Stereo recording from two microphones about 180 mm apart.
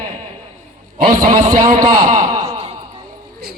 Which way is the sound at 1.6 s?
20° right (ahead or behind).